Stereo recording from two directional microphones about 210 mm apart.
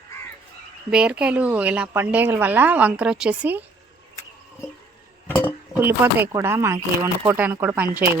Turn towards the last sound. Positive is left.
turn(degrees=-10)  # may be behind; listen again after turning